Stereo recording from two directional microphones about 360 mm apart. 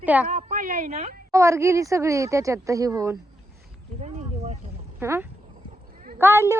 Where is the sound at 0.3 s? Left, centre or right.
Right.